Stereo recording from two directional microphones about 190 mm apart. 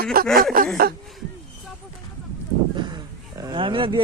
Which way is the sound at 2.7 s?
25° right (ahead or behind).